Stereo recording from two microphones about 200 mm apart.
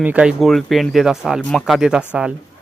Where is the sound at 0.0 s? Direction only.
5° right (ahead or behind).